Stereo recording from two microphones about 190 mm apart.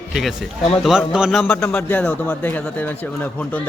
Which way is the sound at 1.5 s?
10° left (ahead or behind).